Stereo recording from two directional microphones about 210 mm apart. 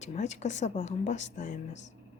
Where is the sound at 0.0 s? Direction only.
35° left (ahead or behind).